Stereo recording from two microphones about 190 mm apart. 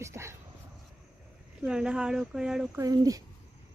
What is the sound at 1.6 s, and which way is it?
Speech, 5° right (ahead or behind).